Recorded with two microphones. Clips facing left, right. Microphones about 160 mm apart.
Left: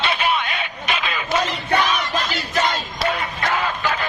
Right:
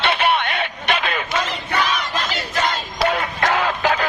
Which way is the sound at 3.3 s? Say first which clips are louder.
Right 3 dB; 75° right (ahead or behind).